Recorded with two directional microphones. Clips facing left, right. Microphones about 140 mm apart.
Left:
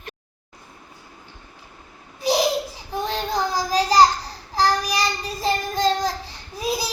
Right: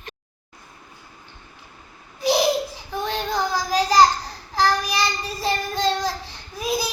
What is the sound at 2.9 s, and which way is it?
Child singing, 35° left (ahead or behind).